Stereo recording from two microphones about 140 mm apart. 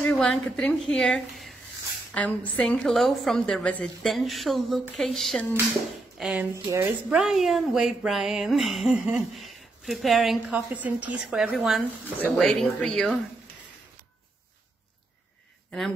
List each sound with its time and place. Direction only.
0.0 s a woman's voice: 10° left (ahead or behind)
6.5 s a woman's voice: 20° right (ahead or behind)
7.1 s speech: 5° right (ahead or behind)